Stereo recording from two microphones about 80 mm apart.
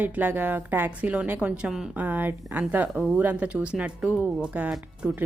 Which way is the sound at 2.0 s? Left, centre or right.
Right.